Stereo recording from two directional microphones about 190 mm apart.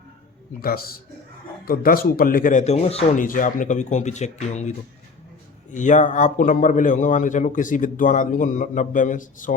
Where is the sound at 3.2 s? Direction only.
45° left (ahead or behind).